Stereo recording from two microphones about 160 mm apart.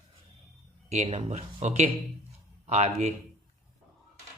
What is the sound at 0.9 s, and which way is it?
Speech, 45° right (ahead or behind).